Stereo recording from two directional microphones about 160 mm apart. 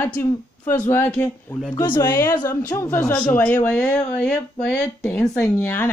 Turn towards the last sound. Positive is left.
turn(degrees=15)  # may be behind; listen again after turning